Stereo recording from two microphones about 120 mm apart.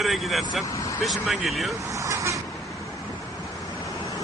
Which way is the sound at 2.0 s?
25° right (ahead or behind).